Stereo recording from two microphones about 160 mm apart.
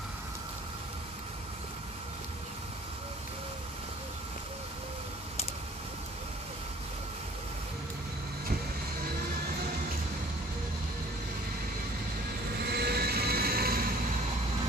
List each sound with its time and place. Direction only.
12.6 s vehicle: 80° right